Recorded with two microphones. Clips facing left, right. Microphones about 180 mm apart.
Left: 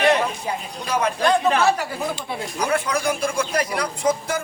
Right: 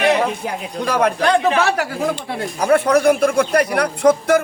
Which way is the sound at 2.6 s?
60° right (ahead or behind).